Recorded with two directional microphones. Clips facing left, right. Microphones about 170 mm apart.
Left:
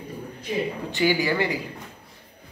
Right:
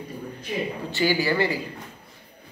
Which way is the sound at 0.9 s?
15° left (ahead or behind).